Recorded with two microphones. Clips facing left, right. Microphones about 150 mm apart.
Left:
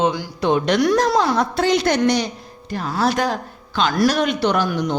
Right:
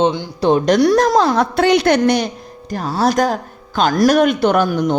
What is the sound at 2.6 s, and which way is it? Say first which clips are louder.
A man's voice: right 3 dB; 35° right (ahead or behind).